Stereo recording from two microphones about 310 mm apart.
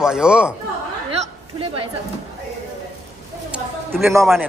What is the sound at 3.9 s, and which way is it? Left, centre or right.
Speech, centre.